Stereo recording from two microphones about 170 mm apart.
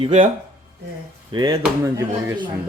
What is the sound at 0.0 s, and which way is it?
Speech, 40° right (ahead or behind).